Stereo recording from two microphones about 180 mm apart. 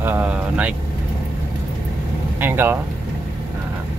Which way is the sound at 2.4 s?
10° right (ahead or behind).